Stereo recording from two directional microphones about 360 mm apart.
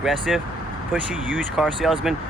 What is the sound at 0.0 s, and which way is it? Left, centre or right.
Speech, centre.